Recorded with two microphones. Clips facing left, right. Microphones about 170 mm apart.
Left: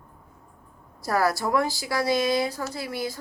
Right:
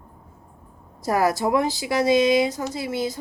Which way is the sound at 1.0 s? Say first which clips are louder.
Right 3 dB; 20° right (ahead or behind).